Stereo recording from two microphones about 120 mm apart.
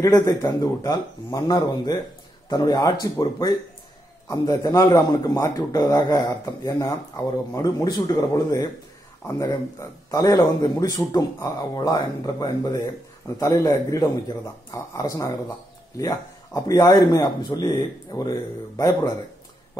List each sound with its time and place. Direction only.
0.0 s a man's voice: 25° left (ahead or behind)